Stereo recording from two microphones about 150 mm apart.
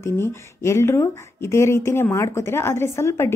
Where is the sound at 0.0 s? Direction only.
15° left (ahead or behind).